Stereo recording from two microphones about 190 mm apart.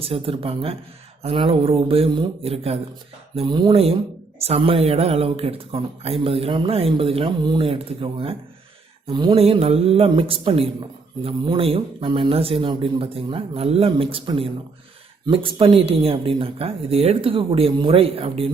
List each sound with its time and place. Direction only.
0.0 s speech: 30° right (ahead or behind)